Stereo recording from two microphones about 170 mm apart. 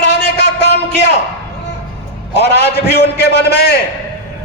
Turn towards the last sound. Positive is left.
turn(degrees=75)  # may be behind; listen again after turning